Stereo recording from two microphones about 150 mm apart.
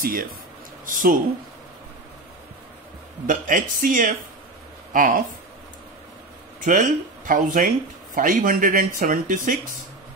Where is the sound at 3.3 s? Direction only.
60° right (ahead or behind).